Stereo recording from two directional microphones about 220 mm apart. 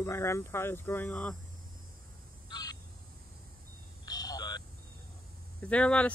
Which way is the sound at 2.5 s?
20° left (ahead or behind).